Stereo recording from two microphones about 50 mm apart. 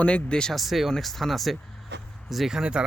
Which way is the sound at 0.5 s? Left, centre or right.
Centre.